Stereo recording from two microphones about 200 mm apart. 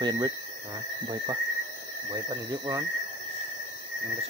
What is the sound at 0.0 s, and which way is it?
Speech, 20° right (ahead or behind).